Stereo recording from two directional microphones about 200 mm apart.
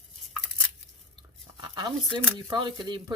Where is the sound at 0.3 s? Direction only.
Centre (ahead or behind).